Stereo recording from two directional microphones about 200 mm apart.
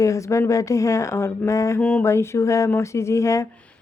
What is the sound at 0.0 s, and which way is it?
Speech, 15° left (ahead or behind).